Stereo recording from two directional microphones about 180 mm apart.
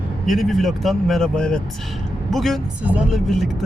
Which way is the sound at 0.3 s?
Centre (ahead or behind).